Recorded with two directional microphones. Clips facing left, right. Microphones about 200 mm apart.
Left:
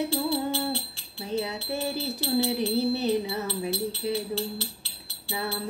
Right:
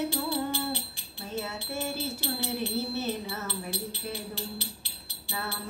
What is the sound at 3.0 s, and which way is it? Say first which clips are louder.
Music: left 7 dB; 15° left (ahead or behind).